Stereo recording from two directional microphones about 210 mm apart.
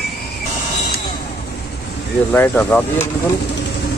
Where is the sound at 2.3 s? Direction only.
10° left (ahead or behind).